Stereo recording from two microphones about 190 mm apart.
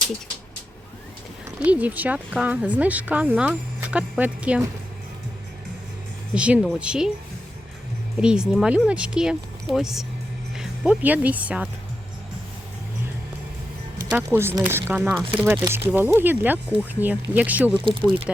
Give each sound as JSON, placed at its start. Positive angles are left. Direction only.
{"t": 1.5, "sound": "speech", "side_deg": -5}
{"t": 6.3, "sound": "speech", "side_deg": -5}
{"t": 8.2, "sound": "speech", "side_deg": -5}
{"t": 14.1, "sound": "speech", "side_deg": -10}
{"t": 17.7, "sound": "speech", "side_deg": -25}